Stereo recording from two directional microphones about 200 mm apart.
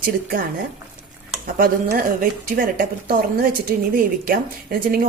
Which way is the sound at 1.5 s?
45° right (ahead or behind).